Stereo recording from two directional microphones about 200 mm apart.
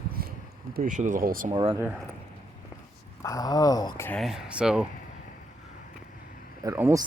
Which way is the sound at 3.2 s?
20° left (ahead or behind).